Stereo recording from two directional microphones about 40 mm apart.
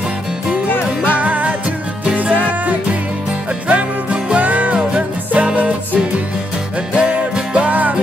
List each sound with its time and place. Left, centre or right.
0.7 s music: left
1.2 s music: right
3.6 s music: right
4.4 s music: right